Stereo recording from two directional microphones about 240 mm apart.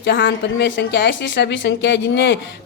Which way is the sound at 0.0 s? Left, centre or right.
Left.